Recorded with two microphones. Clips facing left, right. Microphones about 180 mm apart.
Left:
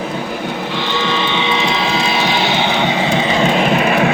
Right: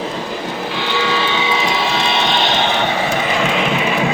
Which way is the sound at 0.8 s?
10° right (ahead or behind).